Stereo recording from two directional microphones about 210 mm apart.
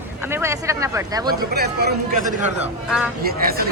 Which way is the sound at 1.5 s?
50° right (ahead or behind).